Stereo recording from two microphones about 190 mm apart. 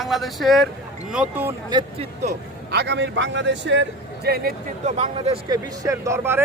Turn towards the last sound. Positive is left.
turn(degrees=-15)  # may be behind; listen again after turning